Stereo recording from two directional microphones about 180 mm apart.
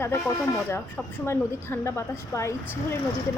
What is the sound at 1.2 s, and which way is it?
Speech, 15° left (ahead or behind).